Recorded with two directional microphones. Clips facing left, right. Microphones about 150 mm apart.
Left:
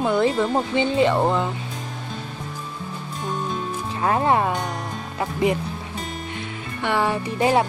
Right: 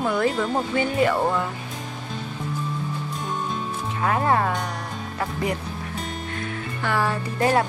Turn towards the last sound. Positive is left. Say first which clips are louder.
# left 2 dB
turn(degrees=20)  # may be behind; listen again after turning